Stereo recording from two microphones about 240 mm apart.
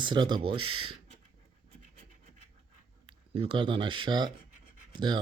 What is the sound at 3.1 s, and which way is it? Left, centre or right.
Speech, right.